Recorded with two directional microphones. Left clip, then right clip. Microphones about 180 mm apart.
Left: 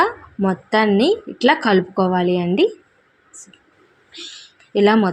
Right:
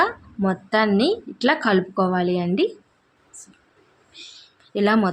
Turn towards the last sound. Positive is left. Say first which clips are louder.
# left 5 dB
turn(degrees=15)  # may be behind; listen again after turning